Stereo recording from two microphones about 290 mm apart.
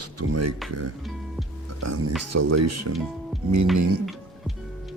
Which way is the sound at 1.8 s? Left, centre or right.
Right.